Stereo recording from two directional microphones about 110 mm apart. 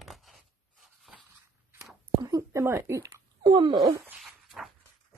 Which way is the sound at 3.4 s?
45° right (ahead or behind).